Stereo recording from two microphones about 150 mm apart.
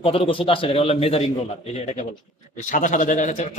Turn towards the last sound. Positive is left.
turn(degrees=50)  # may be behind; listen again after turning